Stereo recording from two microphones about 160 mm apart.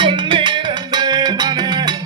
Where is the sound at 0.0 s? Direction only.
30° right (ahead or behind).